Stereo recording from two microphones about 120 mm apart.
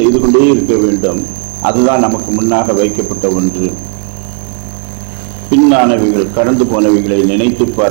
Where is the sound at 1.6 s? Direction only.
20° right (ahead or behind).